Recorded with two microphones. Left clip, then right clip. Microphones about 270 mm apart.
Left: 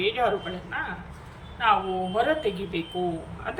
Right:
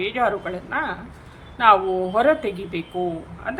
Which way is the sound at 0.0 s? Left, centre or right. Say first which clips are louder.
Right 3 dB; centre.